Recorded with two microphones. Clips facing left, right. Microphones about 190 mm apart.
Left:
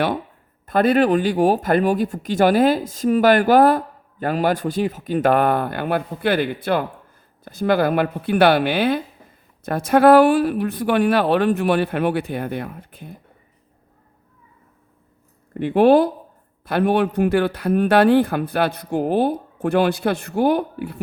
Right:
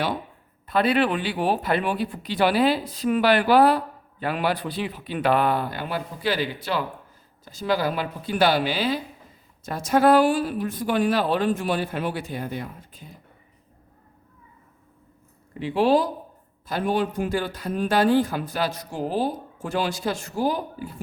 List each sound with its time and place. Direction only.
0.7 s speech: 45° left (ahead or behind)
15.5 s speech: 55° left (ahead or behind)